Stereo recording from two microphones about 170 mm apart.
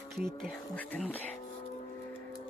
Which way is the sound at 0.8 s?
10° left (ahead or behind).